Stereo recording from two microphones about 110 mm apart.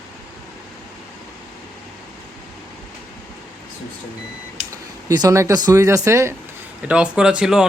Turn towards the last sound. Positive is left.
turn(degrees=-5)  # may be behind; listen again after turning